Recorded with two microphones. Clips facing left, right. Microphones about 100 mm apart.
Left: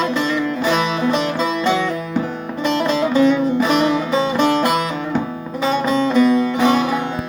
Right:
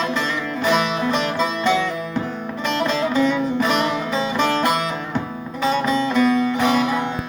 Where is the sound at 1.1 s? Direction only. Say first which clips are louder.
Left 2 dB; 15° left (ahead or behind).